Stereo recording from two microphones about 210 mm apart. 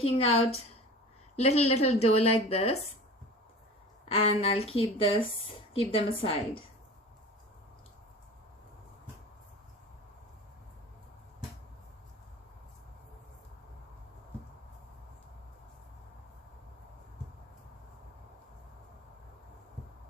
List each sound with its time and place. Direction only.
0.0 s a woman's voice: 30° left (ahead or behind)
4.1 s a woman's voice: 30° left (ahead or behind)